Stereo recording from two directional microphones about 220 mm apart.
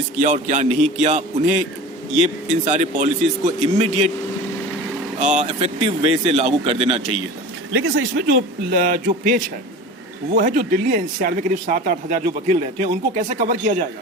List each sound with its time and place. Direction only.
0.2 s speech: 35° right (ahead or behind)
2.5 s speech: 30° right (ahead or behind)
5.2 s speech: 35° right (ahead or behind)
7.7 s speech: 50° right (ahead or behind); by 13.8 s 35° right (ahead or behind)